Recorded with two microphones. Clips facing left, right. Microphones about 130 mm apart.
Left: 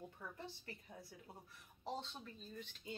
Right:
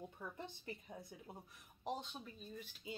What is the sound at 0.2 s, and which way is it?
A woman's voice, 20° right (ahead or behind).